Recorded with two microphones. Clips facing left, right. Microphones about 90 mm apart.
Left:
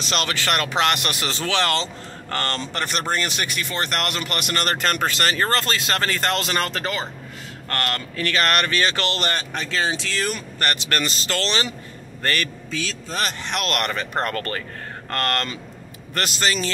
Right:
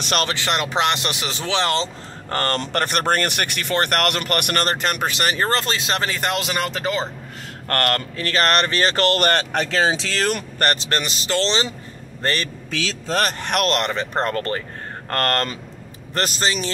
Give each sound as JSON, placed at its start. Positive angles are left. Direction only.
{"t": 0.3, "sound": "speech", "side_deg": -20}
{"t": 2.8, "sound": "speech", "side_deg": -55}
{"t": 4.6, "sound": "speech", "side_deg": -20}
{"t": 7.6, "sound": "speech", "side_deg": -45}
{"t": 8.2, "sound": "speech", "side_deg": -35}
{"t": 9.4, "sound": "speech", "side_deg": -75}
{"t": 10.6, "sound": "speech", "side_deg": -35}
{"t": 11.0, "sound": "a man's voice", "side_deg": -20}
{"t": 12.7, "sound": "speech", "side_deg": -90}
{"t": 13.2, "sound": "speech", "side_deg": -55}
{"t": 13.7, "sound": "speech", "side_deg": -25}
{"t": 15.0, "sound": "speech", "side_deg": -40}
{"t": 16.2, "sound": "speech", "side_deg": -30}